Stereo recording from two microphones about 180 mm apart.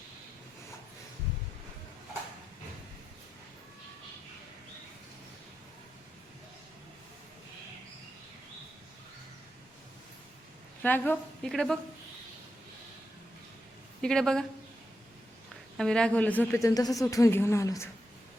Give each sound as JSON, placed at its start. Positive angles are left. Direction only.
{"t": 10.8, "sound": "a woman's voice", "side_deg": 10}
{"t": 14.0, "sound": "a woman's voice", "side_deg": 5}
{"t": 15.8, "sound": "a woman's voice", "side_deg": 5}